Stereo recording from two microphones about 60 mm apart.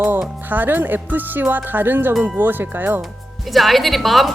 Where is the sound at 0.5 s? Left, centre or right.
Right.